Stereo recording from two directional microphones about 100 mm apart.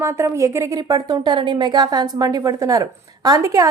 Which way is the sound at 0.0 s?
30° right (ahead or behind).